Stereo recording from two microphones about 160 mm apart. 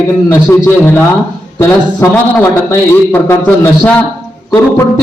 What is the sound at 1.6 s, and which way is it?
Speech, 15° left (ahead or behind).